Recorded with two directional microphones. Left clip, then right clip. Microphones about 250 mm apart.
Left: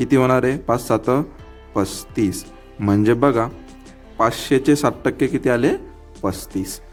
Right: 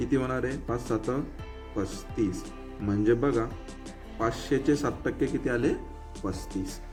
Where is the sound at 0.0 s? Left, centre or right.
Left.